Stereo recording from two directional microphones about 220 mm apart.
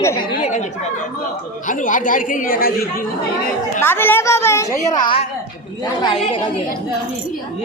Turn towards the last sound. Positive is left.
turn(degrees=15)  # may be behind; listen again after turning